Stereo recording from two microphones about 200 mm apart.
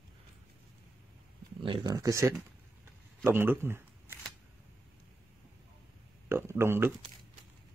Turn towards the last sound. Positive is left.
turn(degrees=-10)  # may be behind; listen again after turning